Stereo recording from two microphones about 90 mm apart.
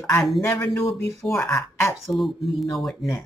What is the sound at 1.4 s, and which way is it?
Speech, 25° left (ahead or behind).